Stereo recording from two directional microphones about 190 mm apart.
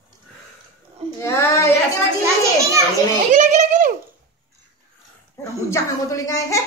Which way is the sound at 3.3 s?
40° right (ahead or behind).